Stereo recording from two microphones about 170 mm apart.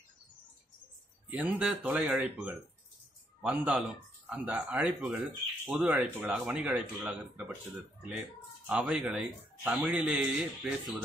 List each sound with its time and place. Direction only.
1.3 s a man's voice: 10° right (ahead or behind)